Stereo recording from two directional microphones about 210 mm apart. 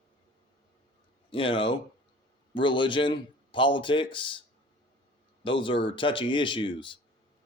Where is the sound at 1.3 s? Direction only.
25° left (ahead or behind).